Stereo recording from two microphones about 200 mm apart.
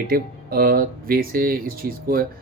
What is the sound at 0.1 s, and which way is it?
Speech, 45° right (ahead or behind).